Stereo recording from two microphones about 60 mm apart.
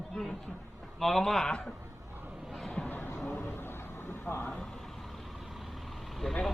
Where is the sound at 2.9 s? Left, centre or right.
Left.